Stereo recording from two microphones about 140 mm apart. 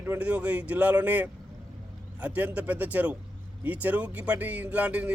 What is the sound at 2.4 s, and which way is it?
Speech, 10° right (ahead or behind).